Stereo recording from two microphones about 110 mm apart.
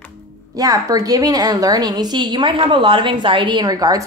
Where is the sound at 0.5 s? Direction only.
35° right (ahead or behind).